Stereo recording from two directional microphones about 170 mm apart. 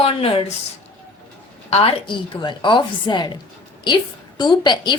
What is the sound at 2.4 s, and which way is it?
Speech, 25° left (ahead or behind).